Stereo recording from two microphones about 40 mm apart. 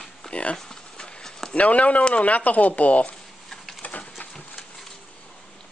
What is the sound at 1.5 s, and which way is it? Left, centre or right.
Speech, left.